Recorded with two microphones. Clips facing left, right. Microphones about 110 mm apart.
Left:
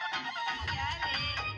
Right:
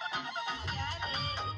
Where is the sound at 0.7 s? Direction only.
25° right (ahead or behind).